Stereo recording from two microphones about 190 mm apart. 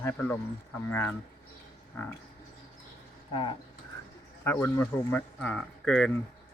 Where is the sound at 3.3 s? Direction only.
25° left (ahead or behind).